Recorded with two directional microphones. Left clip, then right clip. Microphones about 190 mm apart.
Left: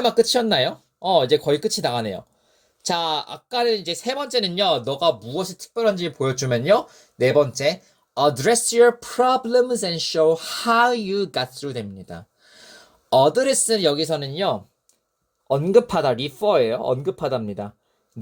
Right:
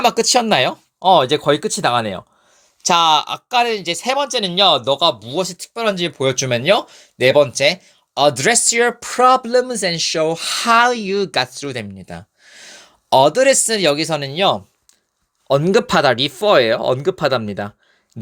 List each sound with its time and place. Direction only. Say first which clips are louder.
0.0 s speech: right 3 dB; 30° right (ahead or behind)
15.7 s speech: right 1 dB; 90° right